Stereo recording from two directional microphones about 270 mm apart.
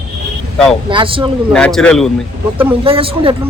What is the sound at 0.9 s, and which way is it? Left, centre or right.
Speech, centre.